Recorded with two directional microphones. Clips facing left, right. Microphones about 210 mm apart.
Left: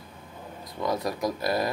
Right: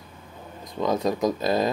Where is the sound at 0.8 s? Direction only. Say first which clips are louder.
Right 5 dB; 20° right (ahead or behind).